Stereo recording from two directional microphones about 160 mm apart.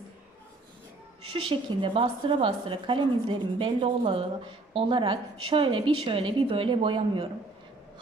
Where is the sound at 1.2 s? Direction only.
30° right (ahead or behind).